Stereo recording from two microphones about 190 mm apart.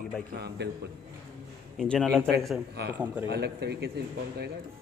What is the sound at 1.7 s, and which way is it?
Speech, 5° left (ahead or behind).